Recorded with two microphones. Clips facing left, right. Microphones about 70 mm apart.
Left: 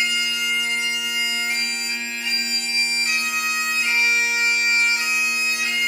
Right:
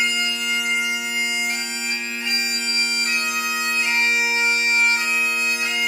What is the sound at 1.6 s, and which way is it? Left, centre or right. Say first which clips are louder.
Bagpipes: left 1 dB; right.